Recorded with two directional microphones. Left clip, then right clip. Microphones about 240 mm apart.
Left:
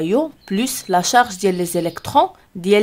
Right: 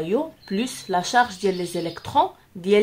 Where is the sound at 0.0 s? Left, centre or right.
Left.